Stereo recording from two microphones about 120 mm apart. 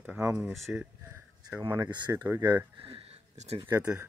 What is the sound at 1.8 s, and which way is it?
Speech, 40° right (ahead or behind).